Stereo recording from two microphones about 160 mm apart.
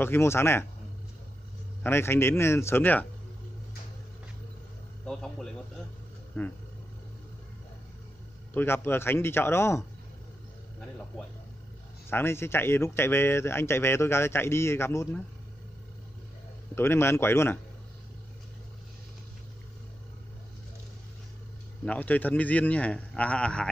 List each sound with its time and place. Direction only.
0.0 s speech: 15° left (ahead or behind)
1.8 s speech: 15° left (ahead or behind)
5.0 s a man's voice: 5° left (ahead or behind)
8.5 s speech: 15° left (ahead or behind)
12.1 s speech: 15° left (ahead or behind)
16.7 s speech: 15° left (ahead or behind)
21.8 s speech: 10° left (ahead or behind)